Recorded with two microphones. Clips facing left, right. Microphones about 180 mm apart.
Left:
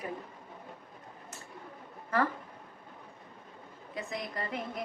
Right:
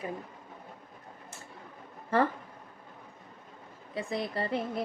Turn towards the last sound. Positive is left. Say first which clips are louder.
# right 5 dB
turn(degrees=-30)  # may be behind; listen again after turning